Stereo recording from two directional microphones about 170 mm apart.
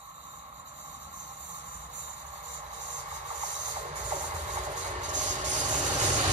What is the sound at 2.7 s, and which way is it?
Train, 45° right (ahead or behind).